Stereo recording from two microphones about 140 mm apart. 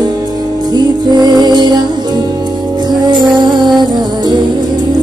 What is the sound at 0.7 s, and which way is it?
Music, 30° right (ahead or behind).